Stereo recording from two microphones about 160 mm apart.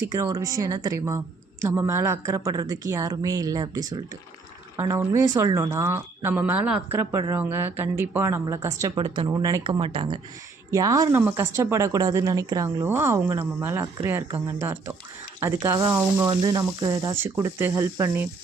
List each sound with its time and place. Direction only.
0.0 s a woman's voice: 20° right (ahead or behind)
9.0 s a woman's voice: 30° right (ahead or behind)
16.3 s a woman's voice: 25° right (ahead or behind)